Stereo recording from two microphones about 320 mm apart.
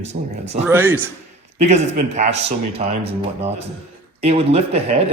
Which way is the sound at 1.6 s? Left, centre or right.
Right.